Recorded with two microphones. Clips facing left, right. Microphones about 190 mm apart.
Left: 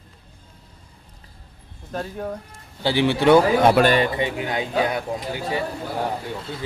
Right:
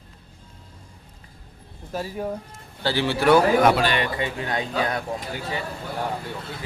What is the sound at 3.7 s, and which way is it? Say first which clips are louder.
Speech: left 6 dB; 50° left (ahead or behind).